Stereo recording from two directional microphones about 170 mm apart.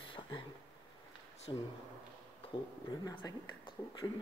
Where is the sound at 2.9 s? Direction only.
25° left (ahead or behind).